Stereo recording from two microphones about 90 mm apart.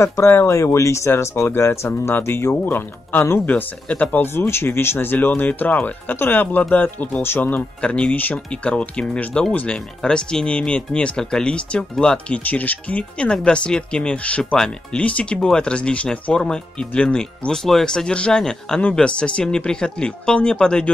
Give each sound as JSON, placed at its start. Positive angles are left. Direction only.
{"t": 0.0, "sound": "speech", "side_deg": 30}